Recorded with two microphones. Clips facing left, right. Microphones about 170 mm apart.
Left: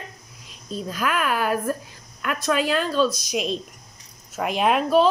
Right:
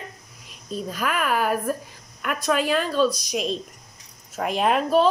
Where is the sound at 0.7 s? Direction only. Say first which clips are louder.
Left 1 dB; centre (ahead or behind).